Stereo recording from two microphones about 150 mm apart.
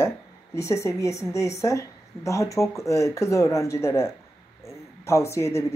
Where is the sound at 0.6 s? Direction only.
20° left (ahead or behind).